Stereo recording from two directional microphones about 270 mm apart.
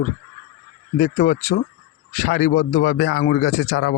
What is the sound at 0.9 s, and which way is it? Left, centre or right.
Speech, left.